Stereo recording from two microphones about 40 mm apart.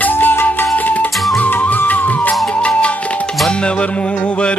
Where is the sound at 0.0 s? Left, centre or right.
Left.